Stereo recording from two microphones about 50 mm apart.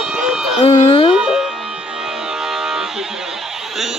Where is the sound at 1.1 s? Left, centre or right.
Centre.